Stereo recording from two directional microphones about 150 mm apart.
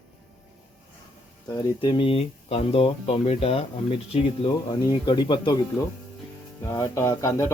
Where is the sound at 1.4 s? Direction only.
30° left (ahead or behind).